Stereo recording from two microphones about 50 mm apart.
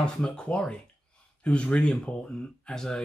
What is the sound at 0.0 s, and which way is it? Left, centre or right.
Speech, centre.